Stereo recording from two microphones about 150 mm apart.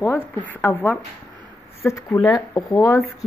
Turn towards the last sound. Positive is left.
turn(degrees=20)  # may be behind; listen again after turning